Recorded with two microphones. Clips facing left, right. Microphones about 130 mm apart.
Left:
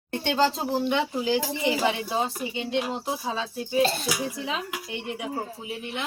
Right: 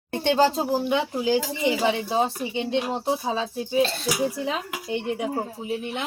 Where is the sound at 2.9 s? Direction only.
35° right (ahead or behind).